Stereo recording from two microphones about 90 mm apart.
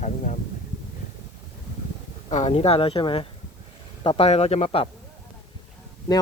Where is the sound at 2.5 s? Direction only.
90° left.